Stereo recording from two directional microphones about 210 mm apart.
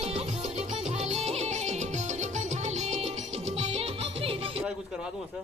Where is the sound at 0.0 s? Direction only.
30° right (ahead or behind).